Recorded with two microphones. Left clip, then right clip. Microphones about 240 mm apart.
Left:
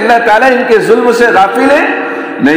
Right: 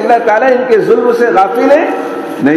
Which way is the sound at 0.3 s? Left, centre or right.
Left.